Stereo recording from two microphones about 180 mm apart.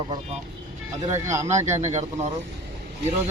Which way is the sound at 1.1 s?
15° right (ahead or behind).